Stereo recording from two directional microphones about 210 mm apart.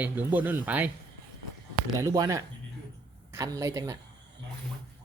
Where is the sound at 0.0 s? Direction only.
10° right (ahead or behind).